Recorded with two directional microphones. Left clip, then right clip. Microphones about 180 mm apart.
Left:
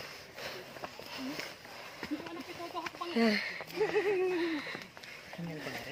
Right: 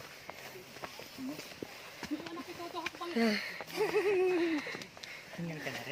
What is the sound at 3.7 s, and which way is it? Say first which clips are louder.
Speech: even; 50° right (ahead or behind).